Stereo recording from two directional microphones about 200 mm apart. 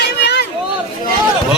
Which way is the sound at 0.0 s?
55° left (ahead or behind).